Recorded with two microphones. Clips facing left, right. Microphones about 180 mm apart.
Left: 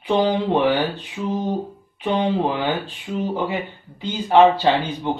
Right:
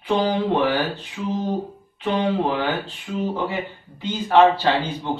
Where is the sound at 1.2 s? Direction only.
20° left (ahead or behind).